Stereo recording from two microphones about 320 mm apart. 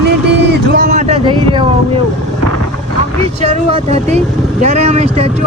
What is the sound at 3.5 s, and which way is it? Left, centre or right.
Speech, centre.